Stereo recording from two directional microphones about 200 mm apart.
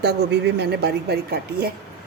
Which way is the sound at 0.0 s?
55° right (ahead or behind).